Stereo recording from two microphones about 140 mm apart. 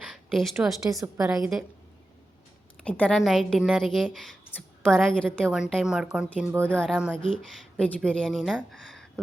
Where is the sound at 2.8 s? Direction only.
10° left (ahead or behind).